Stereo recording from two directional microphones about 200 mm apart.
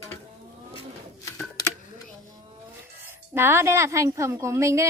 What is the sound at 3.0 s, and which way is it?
A woman's voice, 10° right (ahead or behind).